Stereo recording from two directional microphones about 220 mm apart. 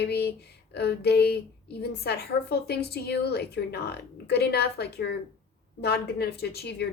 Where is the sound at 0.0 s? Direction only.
45° left (ahead or behind).